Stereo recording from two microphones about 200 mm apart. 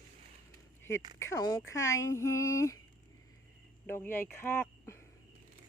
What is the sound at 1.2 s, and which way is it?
Speech, 15° left (ahead or behind).